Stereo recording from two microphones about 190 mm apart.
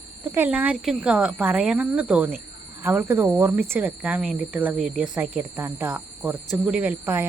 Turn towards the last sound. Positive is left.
turn(degrees=-5)  # may be behind; listen again after turning